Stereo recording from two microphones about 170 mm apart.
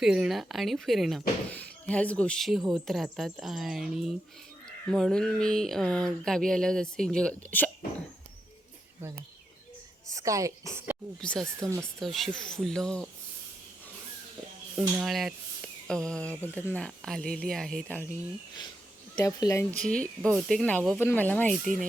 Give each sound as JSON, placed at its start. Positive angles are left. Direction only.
{"t": 0.0, "sound": "speech", "side_deg": 0}
{"t": 10.1, "sound": "a woman's voice", "side_deg": -20}
{"t": 11.2, "sound": "speech", "side_deg": 5}
{"t": 14.8, "sound": "speech", "side_deg": -5}
{"t": 19.1, "sound": "speech", "side_deg": 20}
{"t": 19.9, "sound": "speech", "side_deg": 5}